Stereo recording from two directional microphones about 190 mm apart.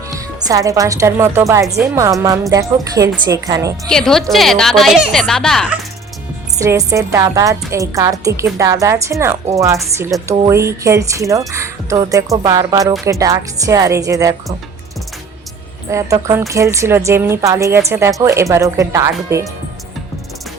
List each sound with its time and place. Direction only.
0.1 s a woman's voice: 20° right (ahead or behind)
3.8 s a woman's voice: 5° left (ahead or behind)
6.6 s speech: 15° right (ahead or behind)
15.9 s speech: 15° right (ahead or behind)